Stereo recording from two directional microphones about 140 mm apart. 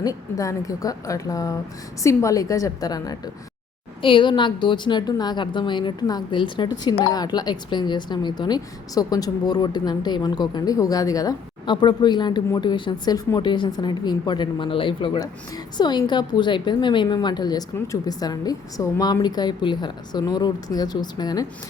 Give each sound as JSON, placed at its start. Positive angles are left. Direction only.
{"t": 0.0, "sound": "a woman's voice", "side_deg": 25}